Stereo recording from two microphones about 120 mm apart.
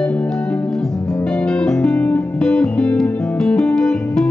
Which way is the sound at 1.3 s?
10° left (ahead or behind).